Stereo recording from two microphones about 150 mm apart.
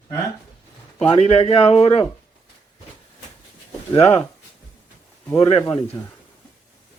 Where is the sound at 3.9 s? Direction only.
45° left (ahead or behind).